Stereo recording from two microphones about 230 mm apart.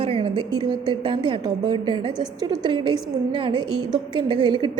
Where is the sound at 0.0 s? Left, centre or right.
Right.